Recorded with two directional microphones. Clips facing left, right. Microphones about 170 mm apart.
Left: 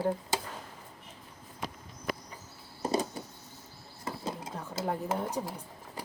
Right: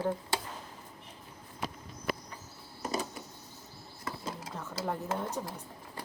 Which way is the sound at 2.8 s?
30° left (ahead or behind).